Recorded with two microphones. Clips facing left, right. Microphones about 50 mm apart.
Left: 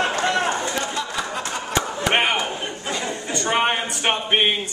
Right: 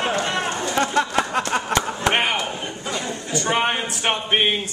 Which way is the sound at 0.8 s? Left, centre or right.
Right.